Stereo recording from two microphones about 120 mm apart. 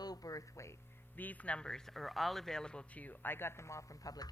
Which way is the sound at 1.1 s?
15° left (ahead or behind).